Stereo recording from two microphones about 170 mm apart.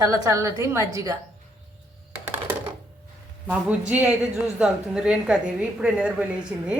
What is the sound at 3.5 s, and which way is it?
A woman's voice, 10° right (ahead or behind).